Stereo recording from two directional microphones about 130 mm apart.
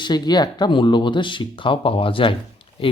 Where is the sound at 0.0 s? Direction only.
30° left (ahead or behind).